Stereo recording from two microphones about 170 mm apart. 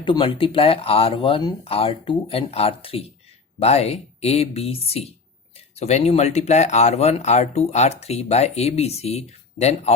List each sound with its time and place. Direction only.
0.0 s speech: 30° left (ahead or behind)